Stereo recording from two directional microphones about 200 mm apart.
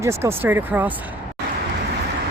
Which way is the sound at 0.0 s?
15° right (ahead or behind).